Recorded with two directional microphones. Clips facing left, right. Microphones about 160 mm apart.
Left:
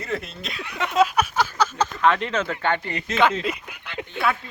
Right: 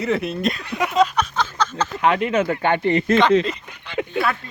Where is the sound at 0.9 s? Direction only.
5° left (ahead or behind).